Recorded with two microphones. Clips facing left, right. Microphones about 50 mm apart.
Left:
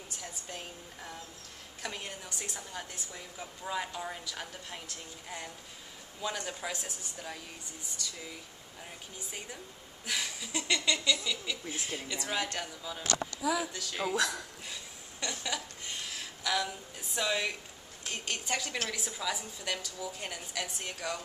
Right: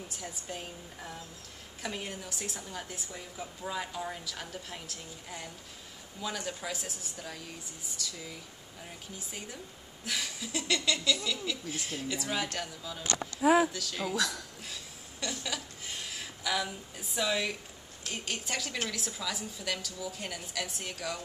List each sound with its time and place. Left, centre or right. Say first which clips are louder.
0.1 s a woman's voice: right 2 dB; centre
10.0 s a woman's voice: even; centre
13.4 s speech: right 10 dB; right
13.7 s a woman's voice: left 1 dB; centre
14.7 s a sound: even; centre
18.1 s a woman's voice: left 1 dB; centre